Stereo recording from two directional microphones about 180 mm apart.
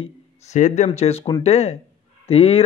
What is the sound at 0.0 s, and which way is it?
A man's voice, 40° left (ahead or behind).